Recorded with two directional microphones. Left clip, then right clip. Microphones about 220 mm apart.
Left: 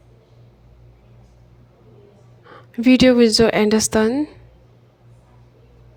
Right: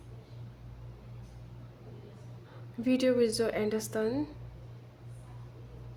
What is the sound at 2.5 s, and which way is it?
A woman's voice, 40° left (ahead or behind).